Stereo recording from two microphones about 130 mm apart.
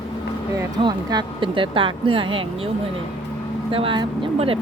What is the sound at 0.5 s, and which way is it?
Speech, 30° right (ahead or behind).